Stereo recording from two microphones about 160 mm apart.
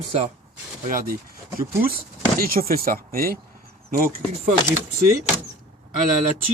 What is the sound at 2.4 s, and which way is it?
Speech, 65° right (ahead or behind).